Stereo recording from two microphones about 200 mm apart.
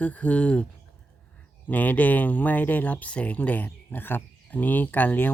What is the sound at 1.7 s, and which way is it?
Speech, 10° left (ahead or behind).